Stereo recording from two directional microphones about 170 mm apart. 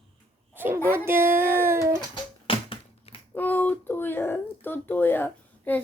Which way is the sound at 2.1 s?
30° left (ahead or behind).